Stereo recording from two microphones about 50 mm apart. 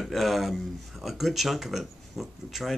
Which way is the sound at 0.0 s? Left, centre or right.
Centre.